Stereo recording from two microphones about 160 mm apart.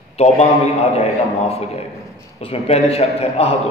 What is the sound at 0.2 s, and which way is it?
A man's voice, 40° left (ahead or behind).